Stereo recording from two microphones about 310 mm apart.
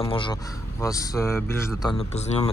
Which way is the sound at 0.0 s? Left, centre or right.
Centre.